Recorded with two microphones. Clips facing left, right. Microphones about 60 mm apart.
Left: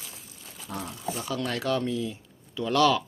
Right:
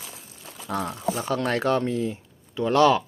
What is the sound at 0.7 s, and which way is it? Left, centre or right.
Speech, right.